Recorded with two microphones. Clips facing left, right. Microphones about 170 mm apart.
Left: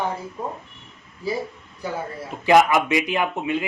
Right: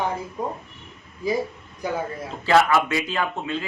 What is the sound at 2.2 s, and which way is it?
A man's voice, 15° left (ahead or behind).